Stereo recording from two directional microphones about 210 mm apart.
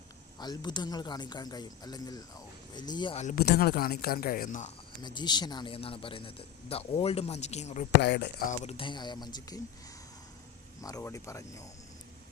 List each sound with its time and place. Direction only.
0.3 s speech: 20° left (ahead or behind)
3.2 s speech: 45° left (ahead or behind)
5.0 s speech: 20° left (ahead or behind)
8.0 s speech: 50° left (ahead or behind)
8.4 s speech: 30° left (ahead or behind)
10.8 s speech: 15° left (ahead or behind)